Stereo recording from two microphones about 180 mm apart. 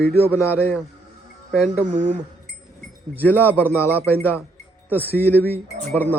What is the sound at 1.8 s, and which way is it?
Speech, 45° right (ahead or behind).